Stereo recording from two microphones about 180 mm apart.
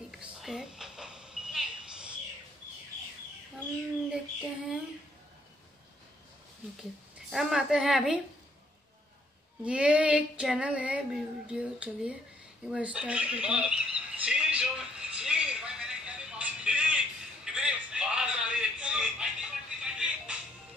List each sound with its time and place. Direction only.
0.1 s a sound: centre (ahead or behind)
4.1 s child singing: 5° right (ahead or behind)
6.8 s a woman's voice: centre (ahead or behind)
9.7 s female singing: 5° right (ahead or behind)
12.6 s squawk: 5° right (ahead or behind)
17.5 s a sound: 5° right (ahead or behind)
19.8 s music: 5° right (ahead or behind)